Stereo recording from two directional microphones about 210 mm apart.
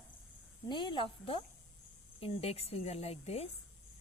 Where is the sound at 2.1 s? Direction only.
30° left (ahead or behind).